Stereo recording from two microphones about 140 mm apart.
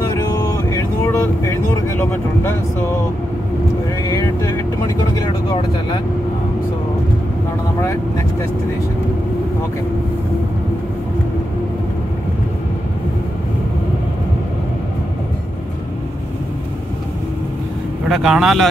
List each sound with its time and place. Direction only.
0.5 s vehicle: 20° left (ahead or behind)
18.0 s speech: centre (ahead or behind)